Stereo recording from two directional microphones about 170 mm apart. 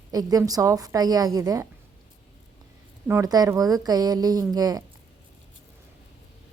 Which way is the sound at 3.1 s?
20° right (ahead or behind).